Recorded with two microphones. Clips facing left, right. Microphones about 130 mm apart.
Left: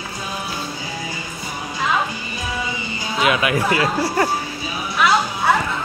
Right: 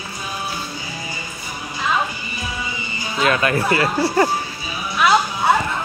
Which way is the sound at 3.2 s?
10° left (ahead or behind).